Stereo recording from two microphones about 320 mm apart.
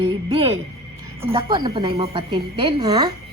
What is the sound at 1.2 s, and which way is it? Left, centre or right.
Speech, centre.